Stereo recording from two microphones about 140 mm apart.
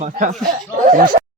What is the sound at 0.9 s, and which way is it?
Speech, 80° right.